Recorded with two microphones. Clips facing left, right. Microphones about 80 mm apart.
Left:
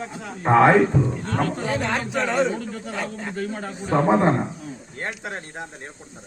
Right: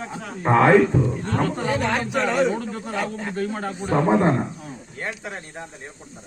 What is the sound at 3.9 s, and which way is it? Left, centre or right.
Speech, left.